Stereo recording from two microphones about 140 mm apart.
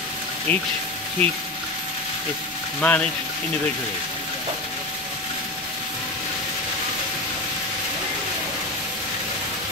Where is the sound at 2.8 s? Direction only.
10° left (ahead or behind).